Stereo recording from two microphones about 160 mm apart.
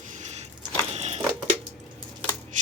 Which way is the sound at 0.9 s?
40° right (ahead or behind).